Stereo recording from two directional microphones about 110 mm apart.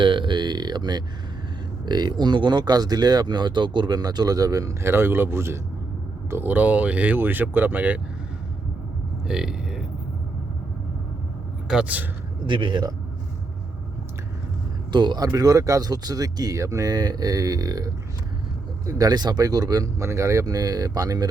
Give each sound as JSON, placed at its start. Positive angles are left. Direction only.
{"t": 0.0, "sound": "a sound", "side_deg": -50}
{"t": 1.9, "sound": "speech", "side_deg": -40}
{"t": 9.2, "sound": "a sound", "side_deg": -5}
{"t": 11.7, "sound": "speech", "side_deg": -10}
{"t": 12.5, "sound": "speech", "side_deg": -50}
{"t": 14.9, "sound": "speech", "side_deg": -40}